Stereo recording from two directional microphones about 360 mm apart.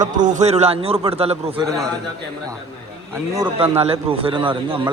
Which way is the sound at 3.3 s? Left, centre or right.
Centre.